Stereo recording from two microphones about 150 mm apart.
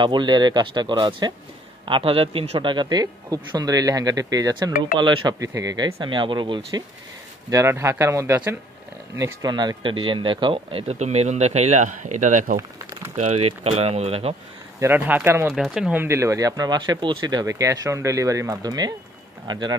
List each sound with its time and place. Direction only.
0.0 s speech: 30° right (ahead or behind)
5.9 s speech: 35° right (ahead or behind)
7.4 s speech: 20° right (ahead or behind); by 14.3 s 45° right (ahead or behind)
14.8 s speech: 15° right (ahead or behind)
16.0 s speech: 20° right (ahead or behind)